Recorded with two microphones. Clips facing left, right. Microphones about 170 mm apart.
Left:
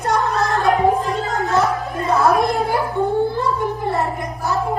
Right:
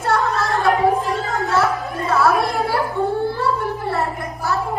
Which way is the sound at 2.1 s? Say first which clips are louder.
Left 2 dB; 20° left (ahead or behind).